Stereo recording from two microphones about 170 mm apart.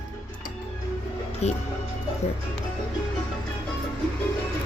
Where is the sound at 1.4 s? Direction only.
40° left (ahead or behind).